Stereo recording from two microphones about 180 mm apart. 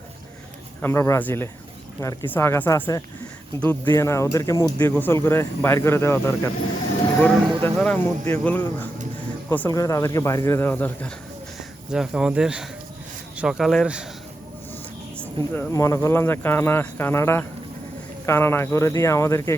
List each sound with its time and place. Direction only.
0.8 s speech: 15° left (ahead or behind)
11.9 s speech: 5° right (ahead or behind)
15.4 s speech: 15° left (ahead or behind)